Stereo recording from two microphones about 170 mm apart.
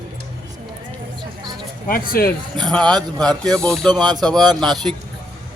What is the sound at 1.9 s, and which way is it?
Speech, 60° left (ahead or behind).